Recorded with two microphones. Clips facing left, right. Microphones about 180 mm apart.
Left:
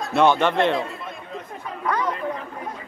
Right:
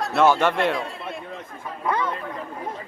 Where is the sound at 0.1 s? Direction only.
5° right (ahead or behind).